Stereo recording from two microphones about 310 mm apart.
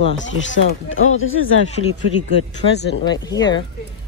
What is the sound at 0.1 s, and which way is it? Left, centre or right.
Speech, left.